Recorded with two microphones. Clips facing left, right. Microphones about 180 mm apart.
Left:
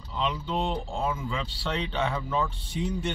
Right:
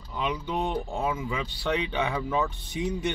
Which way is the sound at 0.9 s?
5° right (ahead or behind).